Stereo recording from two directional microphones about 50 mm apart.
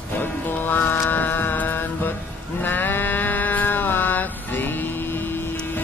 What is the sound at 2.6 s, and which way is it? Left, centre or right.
Cattle, left.